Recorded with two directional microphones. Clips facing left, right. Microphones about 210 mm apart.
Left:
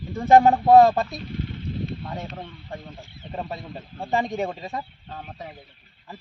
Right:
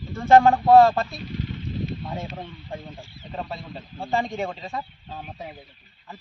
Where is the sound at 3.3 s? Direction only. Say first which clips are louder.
Left 1 dB; 15° left (ahead or behind).